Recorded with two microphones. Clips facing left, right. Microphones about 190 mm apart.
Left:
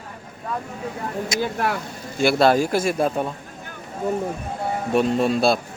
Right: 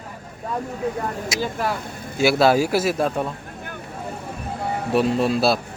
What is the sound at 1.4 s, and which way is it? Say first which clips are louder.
Speech: left 1 dB; 55° left (ahead or behind).